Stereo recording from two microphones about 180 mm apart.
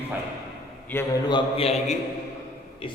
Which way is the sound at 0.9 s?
10° left (ahead or behind).